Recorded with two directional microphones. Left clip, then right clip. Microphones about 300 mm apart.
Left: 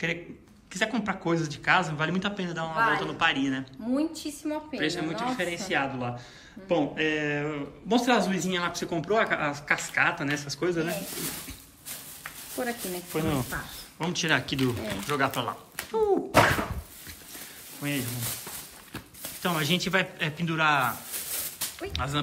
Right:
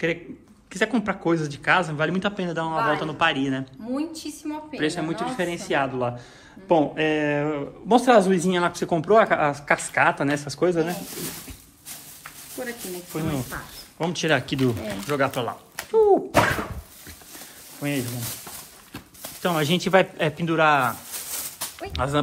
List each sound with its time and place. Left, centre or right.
0.7 s a man's voice: centre
12.5 s speech: centre
13.9 s a man's voice: centre
17.7 s a man's voice: centre
21.1 s a sound: centre
21.7 s speech: centre